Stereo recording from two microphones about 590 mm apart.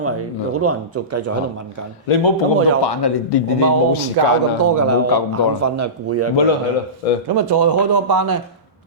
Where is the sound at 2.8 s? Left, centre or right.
Left.